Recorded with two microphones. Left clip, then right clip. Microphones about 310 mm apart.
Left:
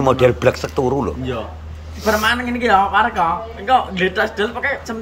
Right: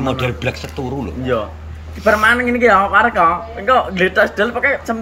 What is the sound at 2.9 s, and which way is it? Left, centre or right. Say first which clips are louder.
Speech: right 4 dB; centre.